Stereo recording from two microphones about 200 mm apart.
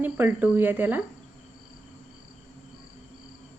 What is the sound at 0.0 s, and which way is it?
Speech, 10° right (ahead or behind).